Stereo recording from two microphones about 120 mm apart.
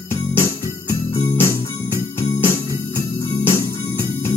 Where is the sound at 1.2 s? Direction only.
20° left (ahead or behind).